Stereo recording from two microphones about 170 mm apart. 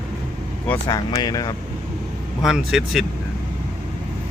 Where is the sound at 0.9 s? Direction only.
20° left (ahead or behind).